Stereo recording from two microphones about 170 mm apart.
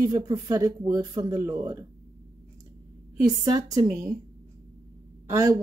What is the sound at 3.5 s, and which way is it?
Speech, 20° right (ahead or behind).